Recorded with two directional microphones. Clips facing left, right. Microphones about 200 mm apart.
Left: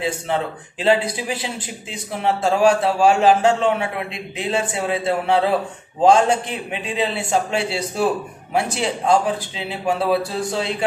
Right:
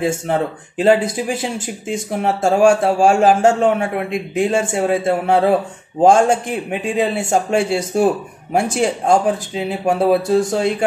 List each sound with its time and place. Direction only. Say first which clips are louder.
0.0 s speech: right 4 dB; 45° right (ahead or behind)